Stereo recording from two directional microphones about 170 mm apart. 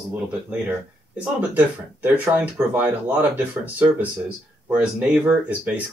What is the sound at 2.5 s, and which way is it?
Speech, 10° right (ahead or behind).